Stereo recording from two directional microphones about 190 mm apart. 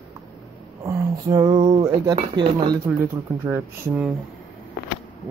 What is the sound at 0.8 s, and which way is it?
Speech, 20° right (ahead or behind).